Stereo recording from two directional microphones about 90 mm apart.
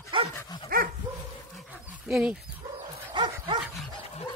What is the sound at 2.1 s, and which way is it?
Speech, 10° right (ahead or behind).